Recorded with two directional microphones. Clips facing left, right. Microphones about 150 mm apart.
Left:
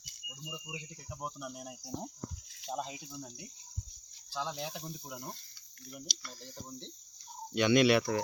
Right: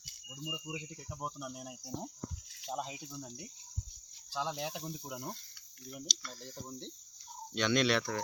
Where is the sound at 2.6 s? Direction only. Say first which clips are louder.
Left 1 dB; 10° right (ahead or behind).